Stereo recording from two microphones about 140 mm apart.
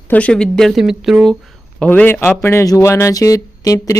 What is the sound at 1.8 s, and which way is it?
Speech, 10° left (ahead or behind).